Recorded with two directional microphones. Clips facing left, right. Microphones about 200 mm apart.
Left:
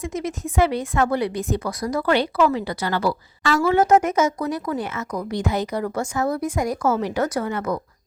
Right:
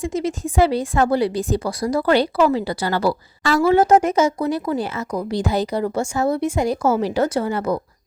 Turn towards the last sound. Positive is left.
turn(degrees=-30)  # may be behind; listen again after turning